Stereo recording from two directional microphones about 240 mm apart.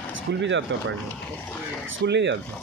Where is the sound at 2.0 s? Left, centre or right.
Right.